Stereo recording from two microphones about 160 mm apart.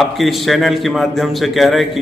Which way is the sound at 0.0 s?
Centre (ahead or behind).